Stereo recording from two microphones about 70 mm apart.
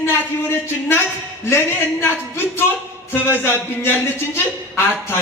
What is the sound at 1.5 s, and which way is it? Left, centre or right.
Speech, left.